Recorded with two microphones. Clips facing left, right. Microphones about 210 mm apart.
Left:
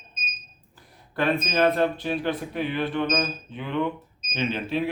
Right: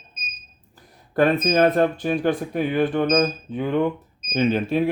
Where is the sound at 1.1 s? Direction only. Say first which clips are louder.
Right 6 dB; 45° right (ahead or behind).